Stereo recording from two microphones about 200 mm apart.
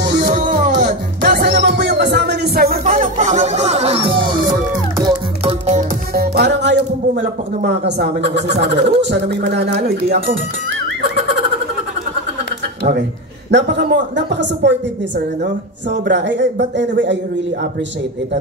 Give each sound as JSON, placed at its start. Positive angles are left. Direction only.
{"t": 0.0, "sound": "music", "side_deg": -45}
{"t": 6.1, "sound": "a man's voice", "side_deg": -50}
{"t": 13.5, "sound": "a man's voice", "side_deg": -60}
{"t": 15.9, "sound": "a man's voice", "side_deg": -60}